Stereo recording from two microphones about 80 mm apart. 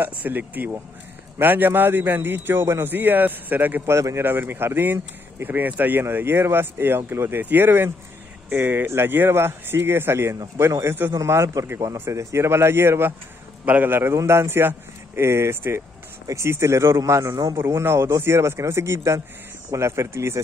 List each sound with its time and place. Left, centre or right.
0.2 s speech: right
3.9 s speech: right